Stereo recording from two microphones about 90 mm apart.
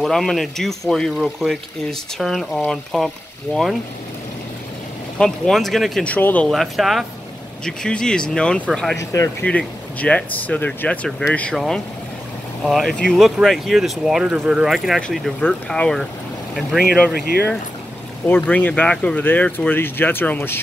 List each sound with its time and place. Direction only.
0.0 s speech: 5° left (ahead or behind)
3.5 s speech: 25° left (ahead or behind)
5.2 s speech: 5° left (ahead or behind)
6.0 s speech: 20° left (ahead or behind)
6.5 s speech: centre (ahead or behind)
8.9 s speech: 35° left (ahead or behind)
9.4 s speech: 15° left (ahead or behind)
11.5 s speech: centre (ahead or behind)
15.7 s speech: 5° left (ahead or behind); by 20.6 s 25° left (ahead or behind)